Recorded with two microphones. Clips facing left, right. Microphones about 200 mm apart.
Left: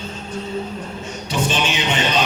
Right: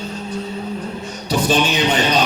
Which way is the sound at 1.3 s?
35° right (ahead or behind).